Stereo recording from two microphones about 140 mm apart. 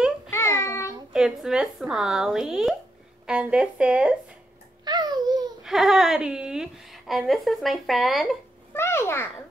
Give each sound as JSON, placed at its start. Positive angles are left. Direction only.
{"t": 0.3, "sound": "child singing", "side_deg": 20}
{"t": 1.1, "sound": "a woman's voice", "side_deg": -5}
{"t": 4.8, "sound": "a sound", "side_deg": -30}
{"t": 5.6, "sound": "a woman's voice", "side_deg": 0}
{"t": 8.7, "sound": "a child's voice", "side_deg": 15}